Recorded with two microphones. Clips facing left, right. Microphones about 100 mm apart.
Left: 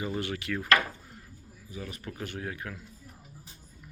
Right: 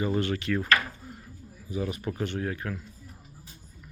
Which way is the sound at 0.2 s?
15° left (ahead or behind).